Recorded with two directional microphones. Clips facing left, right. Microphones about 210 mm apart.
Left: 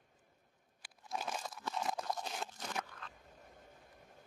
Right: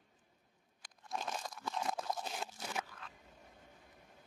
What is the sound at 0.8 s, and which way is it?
Crunch, 5° left (ahead or behind).